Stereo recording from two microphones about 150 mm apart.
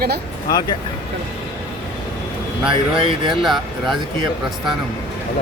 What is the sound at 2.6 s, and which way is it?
Speech, 35° right (ahead or behind).